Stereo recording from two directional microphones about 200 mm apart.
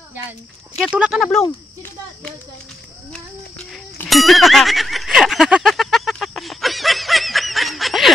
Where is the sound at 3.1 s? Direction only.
5° left (ahead or behind).